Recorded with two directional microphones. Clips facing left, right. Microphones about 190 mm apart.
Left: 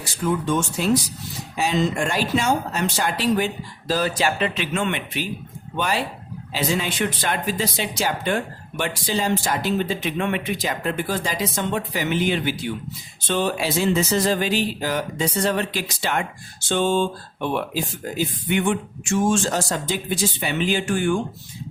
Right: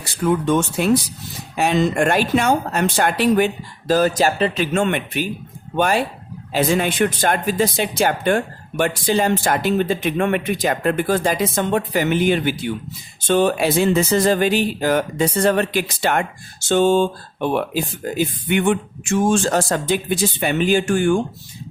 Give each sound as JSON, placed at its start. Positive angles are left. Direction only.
{"t": 0.0, "sound": "speech", "side_deg": -60}